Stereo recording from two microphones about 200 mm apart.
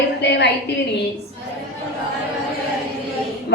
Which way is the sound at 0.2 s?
60° left (ahead or behind).